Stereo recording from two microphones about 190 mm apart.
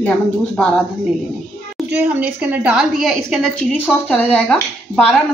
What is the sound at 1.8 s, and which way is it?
A woman's voice, 5° right (ahead or behind).